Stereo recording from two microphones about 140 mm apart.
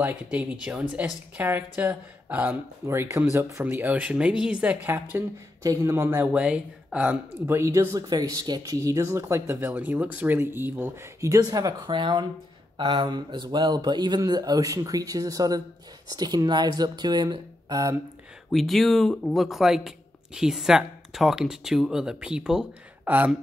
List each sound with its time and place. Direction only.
0.0 s speech: 10° right (ahead or behind); by 17.9 s 30° right (ahead or behind)
18.5 s speech: centre (ahead or behind)